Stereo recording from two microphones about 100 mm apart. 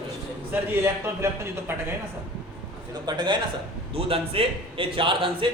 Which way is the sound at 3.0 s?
50° right (ahead or behind).